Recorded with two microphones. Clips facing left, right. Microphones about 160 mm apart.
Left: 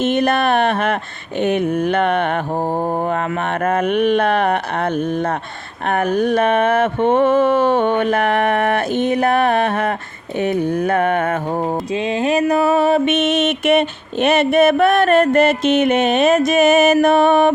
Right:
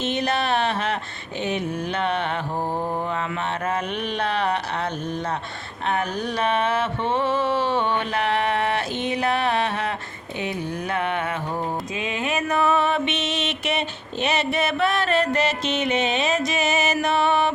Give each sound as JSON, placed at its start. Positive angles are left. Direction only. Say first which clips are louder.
{"t": 0.0, "sound": "mantra", "louder": "left 8 dB", "side_deg": 50}
{"t": 1.4, "sound": "speech", "louder": "left 9 dB", "side_deg": 55}
{"t": 3.1, "sound": "mantra", "louder": "left 7 dB", "side_deg": 50}
{"t": 11.9, "sound": "mantra", "louder": "left 11 dB", "side_deg": 35}